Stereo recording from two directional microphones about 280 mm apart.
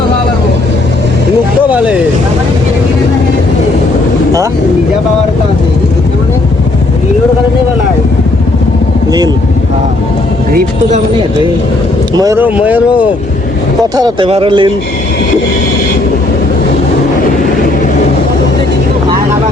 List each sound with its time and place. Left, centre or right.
1.7 s speech: centre
10.5 s speech: right
12.1 s speech: centre
13.9 s speech: centre